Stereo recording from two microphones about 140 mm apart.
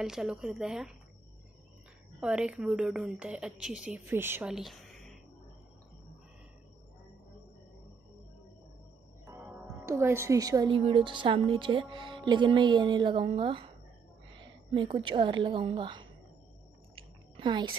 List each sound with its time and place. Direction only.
0.0 s speech: 5° right (ahead or behind)
2.1 s a woman's voice: 5° right (ahead or behind)
4.1 s a woman's voice: 15° right (ahead or behind)
4.5 s a sound: centre (ahead or behind)
9.8 s a woman's voice: 20° right (ahead or behind)
10.7 s a woman's voice: 40° right (ahead or behind)
16.9 s a sound: 35° right (ahead or behind)